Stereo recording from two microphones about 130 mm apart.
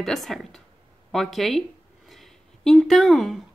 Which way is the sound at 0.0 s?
Centre (ahead or behind).